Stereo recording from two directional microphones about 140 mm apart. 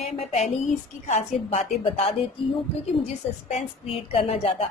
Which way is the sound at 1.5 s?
40° left (ahead or behind).